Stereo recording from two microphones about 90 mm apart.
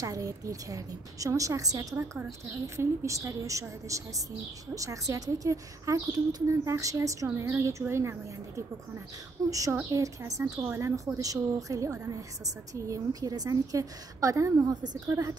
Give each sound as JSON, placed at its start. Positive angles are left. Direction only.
{"t": 0.0, "sound": "a woman's voice", "side_deg": -40}